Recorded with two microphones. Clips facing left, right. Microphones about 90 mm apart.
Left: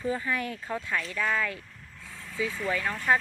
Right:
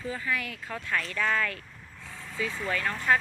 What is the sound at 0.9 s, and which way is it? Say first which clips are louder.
Speech: right 2 dB; 10° left (ahead or behind).